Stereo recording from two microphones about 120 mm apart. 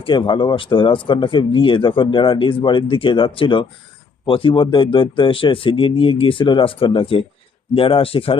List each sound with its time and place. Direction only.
0.0 s speech: 45° left (ahead or behind)